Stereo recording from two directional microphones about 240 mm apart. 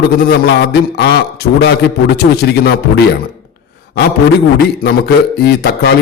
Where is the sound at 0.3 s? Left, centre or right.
Left.